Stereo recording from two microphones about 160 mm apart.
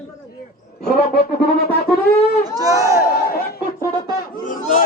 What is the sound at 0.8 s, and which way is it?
Speech, 70° left (ahead or behind).